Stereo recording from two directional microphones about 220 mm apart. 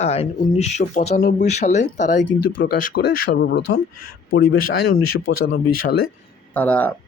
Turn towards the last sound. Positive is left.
turn(degrees=5)  # may be behind; listen again after turning